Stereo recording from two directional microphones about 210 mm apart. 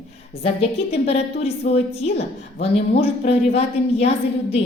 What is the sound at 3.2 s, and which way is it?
Speech, 30° left (ahead or behind).